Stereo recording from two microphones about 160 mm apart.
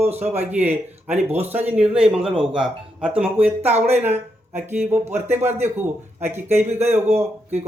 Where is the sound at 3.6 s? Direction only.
40° right (ahead or behind).